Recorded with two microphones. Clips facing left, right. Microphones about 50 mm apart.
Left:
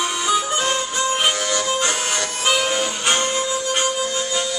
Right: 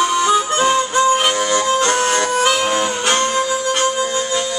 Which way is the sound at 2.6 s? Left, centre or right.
Centre.